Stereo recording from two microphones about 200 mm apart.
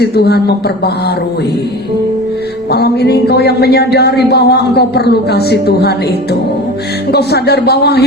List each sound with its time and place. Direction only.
0.0 s speech: 55° left (ahead or behind)
2.7 s speech: 55° left (ahead or behind)
7.1 s speech: 55° left (ahead or behind)